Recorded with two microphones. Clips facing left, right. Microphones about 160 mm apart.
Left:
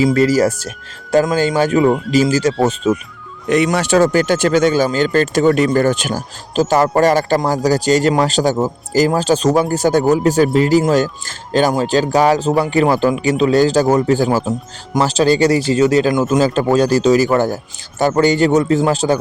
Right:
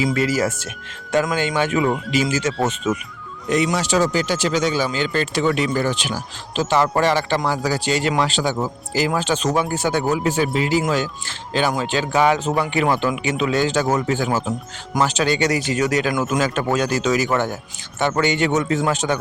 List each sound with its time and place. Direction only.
0.0 s speech: 40° left (ahead or behind)
3.5 s speech: 60° left (ahead or behind); by 19.2 s 35° left (ahead or behind)